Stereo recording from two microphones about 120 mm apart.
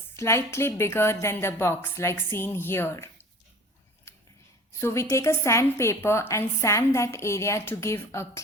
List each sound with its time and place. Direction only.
0.2 s a woman's voice: 20° left (ahead or behind)
4.1 s scissors: 25° left (ahead or behind)
4.8 s a woman's voice: 20° left (ahead or behind)